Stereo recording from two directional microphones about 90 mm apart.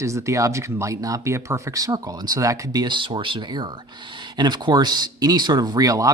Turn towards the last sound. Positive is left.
turn(degrees=-40)  # may be behind; listen again after turning